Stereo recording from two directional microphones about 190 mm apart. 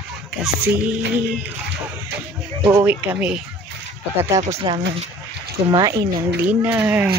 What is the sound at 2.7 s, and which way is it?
Speech, 10° right (ahead or behind).